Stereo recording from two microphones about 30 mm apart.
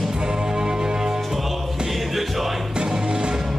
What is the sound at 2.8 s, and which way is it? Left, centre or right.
Music, right.